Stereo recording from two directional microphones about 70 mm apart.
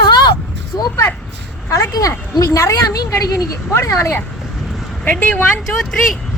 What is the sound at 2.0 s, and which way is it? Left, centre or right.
Speech, left.